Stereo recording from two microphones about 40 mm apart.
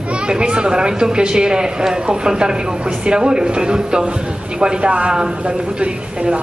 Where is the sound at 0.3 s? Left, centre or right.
Right.